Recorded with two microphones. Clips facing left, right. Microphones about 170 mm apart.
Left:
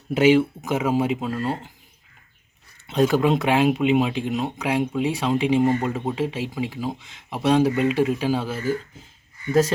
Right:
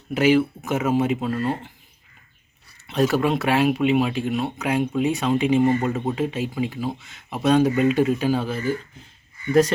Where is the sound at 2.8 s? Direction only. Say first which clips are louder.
Left 1 dB; 20° left (ahead or behind).